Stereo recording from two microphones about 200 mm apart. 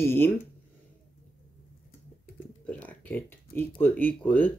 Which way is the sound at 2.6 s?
5° left (ahead or behind).